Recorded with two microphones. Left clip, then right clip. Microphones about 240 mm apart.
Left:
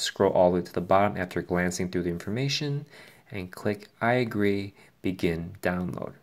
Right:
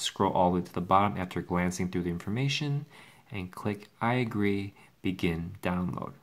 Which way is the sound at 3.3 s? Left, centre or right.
Right.